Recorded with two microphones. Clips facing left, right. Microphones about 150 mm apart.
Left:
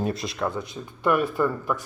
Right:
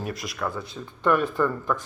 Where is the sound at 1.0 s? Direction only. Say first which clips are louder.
Even; 10° left (ahead or behind).